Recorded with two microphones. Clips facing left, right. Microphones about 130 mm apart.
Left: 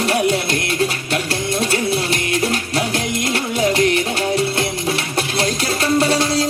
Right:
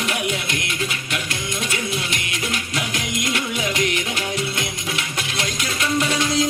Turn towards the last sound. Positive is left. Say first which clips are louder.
# left 5 dB
turn(degrees=35)  # may be behind; listen again after turning